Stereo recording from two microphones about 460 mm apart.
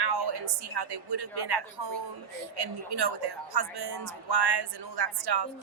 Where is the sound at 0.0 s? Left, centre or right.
Right.